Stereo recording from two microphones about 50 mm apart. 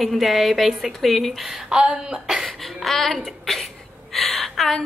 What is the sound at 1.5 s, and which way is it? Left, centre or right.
Speech, centre.